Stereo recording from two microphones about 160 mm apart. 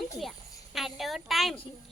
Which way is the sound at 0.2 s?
Centre (ahead or behind).